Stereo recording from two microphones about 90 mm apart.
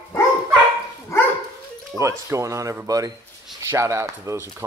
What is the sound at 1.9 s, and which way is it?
Speech, 35° right (ahead or behind).